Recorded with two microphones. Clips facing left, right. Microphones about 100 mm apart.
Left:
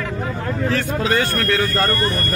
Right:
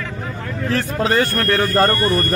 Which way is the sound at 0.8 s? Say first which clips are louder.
Right 2 dB; 35° right (ahead or behind).